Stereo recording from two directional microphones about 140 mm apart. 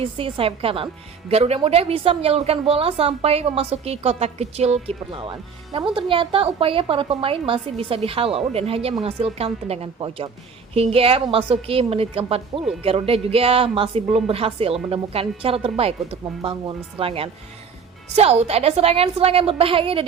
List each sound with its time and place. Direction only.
0.0 s a woman's voice: 40° right (ahead or behind)